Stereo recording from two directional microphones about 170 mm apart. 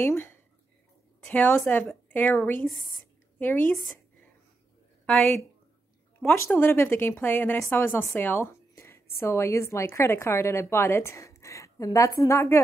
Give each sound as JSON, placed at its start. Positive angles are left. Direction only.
{"t": 0.0, "sound": "a woman's voice", "side_deg": 15}
{"t": 5.0, "sound": "a woman's voice", "side_deg": 5}